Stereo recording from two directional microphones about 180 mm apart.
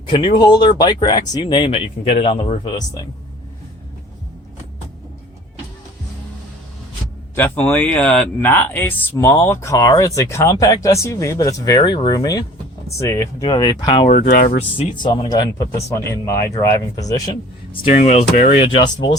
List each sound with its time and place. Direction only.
0.1 s speech: 30° left (ahead or behind)
2.6 s speech: 20° left (ahead or behind)
7.3 s speech: 10° left (ahead or behind); by 14.1 s 25° left (ahead or behind)
14.1 s speech: 50° left (ahead or behind)
14.9 s speech: 25° left (ahead or behind)
17.8 s speech: 40° left (ahead or behind)